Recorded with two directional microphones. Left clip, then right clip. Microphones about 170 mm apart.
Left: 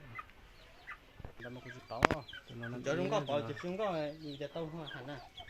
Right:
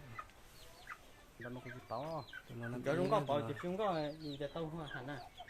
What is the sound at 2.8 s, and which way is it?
Speech, 25° right (ahead or behind).